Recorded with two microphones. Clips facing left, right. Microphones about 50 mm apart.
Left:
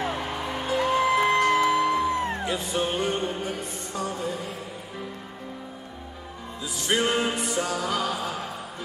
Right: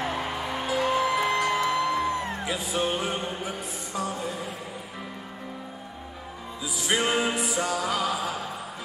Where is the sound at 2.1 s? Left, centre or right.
Left.